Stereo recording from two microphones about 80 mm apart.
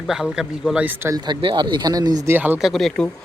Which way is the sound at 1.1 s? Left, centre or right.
Right.